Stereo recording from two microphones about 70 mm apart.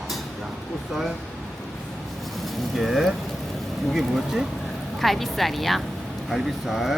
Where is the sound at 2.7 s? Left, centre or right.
Centre.